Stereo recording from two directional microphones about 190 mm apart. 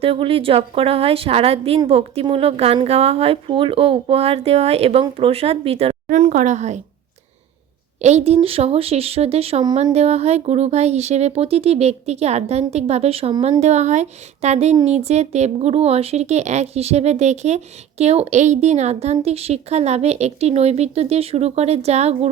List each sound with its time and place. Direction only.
0.0 s speech: 30° right (ahead or behind)
8.0 s speech: 35° right (ahead or behind)